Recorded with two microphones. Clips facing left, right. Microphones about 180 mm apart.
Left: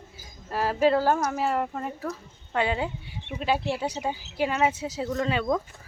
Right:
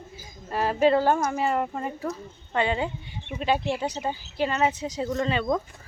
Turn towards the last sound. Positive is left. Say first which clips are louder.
# even
turn(degrees=5)  # may be behind; listen again after turning